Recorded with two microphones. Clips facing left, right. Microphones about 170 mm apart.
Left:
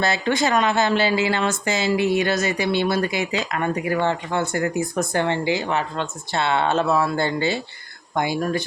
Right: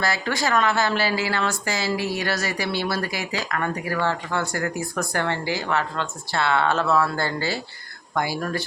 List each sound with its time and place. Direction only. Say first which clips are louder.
0.0 s speech: left 4 dB; 20° left (ahead or behind)